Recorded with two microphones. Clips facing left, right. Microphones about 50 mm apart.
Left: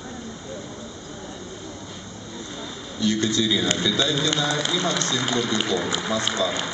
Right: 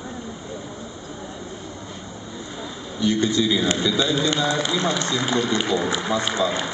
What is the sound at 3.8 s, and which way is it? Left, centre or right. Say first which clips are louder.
Speech: right 2 dB; centre.